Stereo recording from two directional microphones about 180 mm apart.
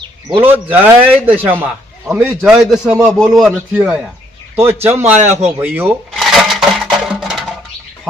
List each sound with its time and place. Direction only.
0.3 s a man's voice: 10° right (ahead or behind)
5.2 s speech: 40° right (ahead or behind)
5.5 s a man's voice: 15° right (ahead or behind)
6.1 s music: centre (ahead or behind)